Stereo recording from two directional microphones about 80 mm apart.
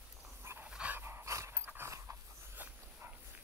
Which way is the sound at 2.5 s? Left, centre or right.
Right.